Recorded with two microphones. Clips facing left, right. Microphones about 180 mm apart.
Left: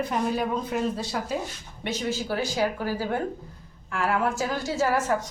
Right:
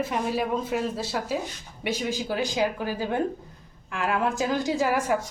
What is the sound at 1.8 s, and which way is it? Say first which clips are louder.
A woman's voice: right 1 dB; 15° right (ahead or behind).